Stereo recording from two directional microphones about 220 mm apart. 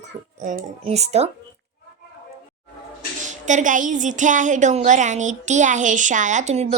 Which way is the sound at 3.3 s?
35° right (ahead or behind).